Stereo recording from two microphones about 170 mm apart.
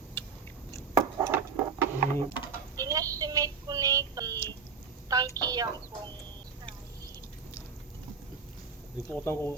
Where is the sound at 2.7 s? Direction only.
20° right (ahead or behind).